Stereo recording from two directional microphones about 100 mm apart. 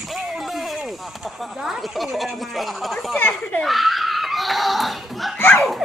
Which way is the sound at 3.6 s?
Centre (ahead or behind).